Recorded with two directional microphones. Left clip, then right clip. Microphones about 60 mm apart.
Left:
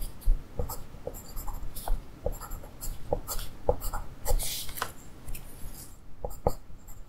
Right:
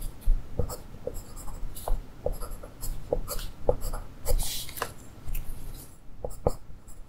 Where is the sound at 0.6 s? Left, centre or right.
Centre.